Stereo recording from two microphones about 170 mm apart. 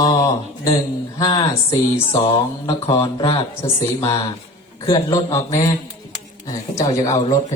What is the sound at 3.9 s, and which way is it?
A man's voice, 20° left (ahead or behind).